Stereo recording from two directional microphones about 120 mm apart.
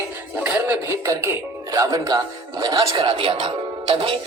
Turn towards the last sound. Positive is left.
turn(degrees=-50)  # may be behind; listen again after turning